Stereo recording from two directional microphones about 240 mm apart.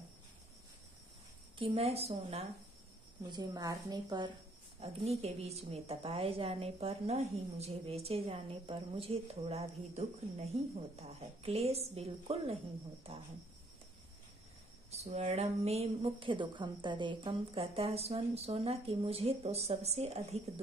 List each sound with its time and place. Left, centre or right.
1.6 s a woman's voice: right
14.9 s a woman's voice: right